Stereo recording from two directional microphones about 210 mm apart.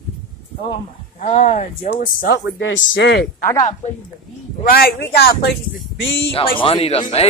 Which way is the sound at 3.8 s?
35° left (ahead or behind).